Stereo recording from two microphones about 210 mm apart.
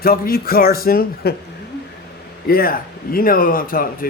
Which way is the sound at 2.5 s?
45° left (ahead or behind).